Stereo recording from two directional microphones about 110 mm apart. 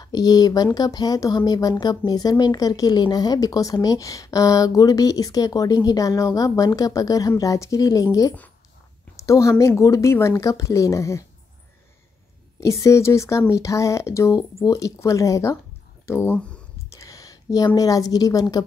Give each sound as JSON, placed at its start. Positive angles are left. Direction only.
{"t": 0.0, "sound": "speech", "side_deg": 35}
{"t": 12.5, "sound": "a woman's voice", "side_deg": 25}